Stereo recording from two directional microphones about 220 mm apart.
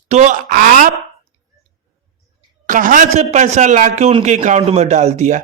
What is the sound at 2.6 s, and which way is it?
A man's voice, 35° right (ahead or behind).